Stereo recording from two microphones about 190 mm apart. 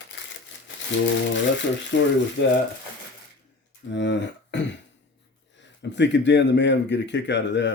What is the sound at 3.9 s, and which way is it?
Speech, 70° left (ahead or behind).